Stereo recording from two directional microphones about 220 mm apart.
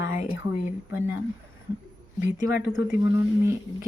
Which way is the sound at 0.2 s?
35° left (ahead or behind).